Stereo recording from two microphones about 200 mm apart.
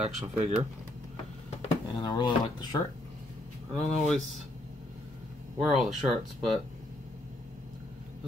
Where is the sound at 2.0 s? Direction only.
20° left (ahead or behind).